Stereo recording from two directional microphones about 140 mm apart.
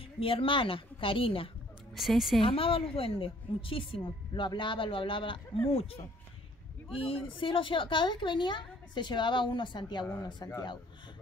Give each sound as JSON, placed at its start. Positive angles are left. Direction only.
{"t": 0.2, "sound": "a woman's voice", "side_deg": 40}
{"t": 2.0, "sound": "a woman's voice", "side_deg": 0}
{"t": 2.4, "sound": "a woman's voice", "side_deg": 40}